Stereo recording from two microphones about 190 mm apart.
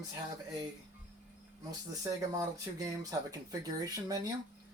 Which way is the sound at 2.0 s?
20° right (ahead or behind).